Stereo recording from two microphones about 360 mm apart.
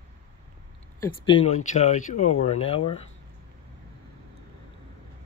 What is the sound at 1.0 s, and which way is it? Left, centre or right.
Speech, centre.